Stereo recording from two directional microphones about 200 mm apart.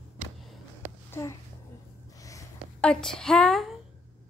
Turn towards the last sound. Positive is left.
turn(degrees=0)  # may be behind; listen again after turning